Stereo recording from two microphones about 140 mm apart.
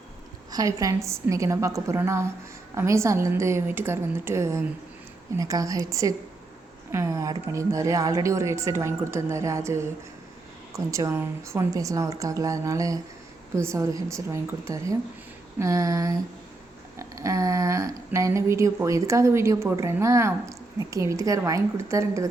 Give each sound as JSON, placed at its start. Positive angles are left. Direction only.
{"t": 0.5, "sound": "speech", "side_deg": -25}